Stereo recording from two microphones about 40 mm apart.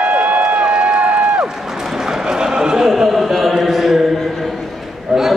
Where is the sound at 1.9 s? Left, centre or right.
Centre.